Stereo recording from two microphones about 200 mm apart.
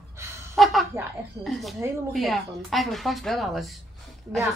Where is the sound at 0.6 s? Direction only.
Centre (ahead or behind).